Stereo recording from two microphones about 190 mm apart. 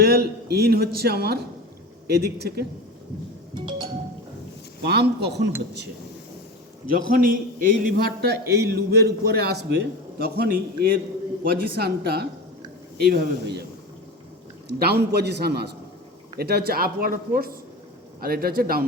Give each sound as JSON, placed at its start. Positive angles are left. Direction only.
{"t": 0.0, "sound": "a man's voice", "side_deg": -55}
{"t": 3.5, "sound": "music", "side_deg": -25}
{"t": 4.8, "sound": "a man's voice", "side_deg": -60}
{"t": 6.9, "sound": "a man's voice", "side_deg": -45}
{"t": 14.7, "sound": "a man's voice", "side_deg": -60}